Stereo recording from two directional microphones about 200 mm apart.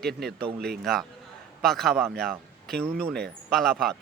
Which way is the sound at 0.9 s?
Centre (ahead or behind).